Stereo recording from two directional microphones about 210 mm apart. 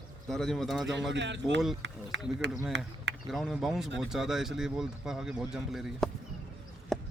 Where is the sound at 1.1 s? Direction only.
55° right (ahead or behind).